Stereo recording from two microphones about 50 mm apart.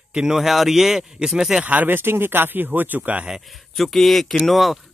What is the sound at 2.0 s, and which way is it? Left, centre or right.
Speech, right.